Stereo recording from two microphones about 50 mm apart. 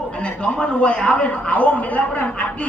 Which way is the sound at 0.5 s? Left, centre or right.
Centre.